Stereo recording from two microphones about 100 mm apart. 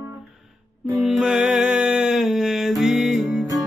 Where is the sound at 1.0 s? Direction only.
5° right (ahead or behind).